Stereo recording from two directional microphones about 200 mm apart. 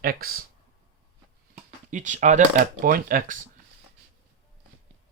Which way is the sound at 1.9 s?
40° right (ahead or behind).